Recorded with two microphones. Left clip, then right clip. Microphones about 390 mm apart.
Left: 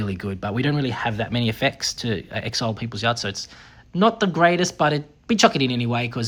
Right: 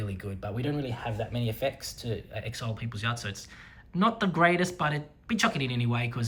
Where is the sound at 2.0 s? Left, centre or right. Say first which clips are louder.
Left 9 dB; centre.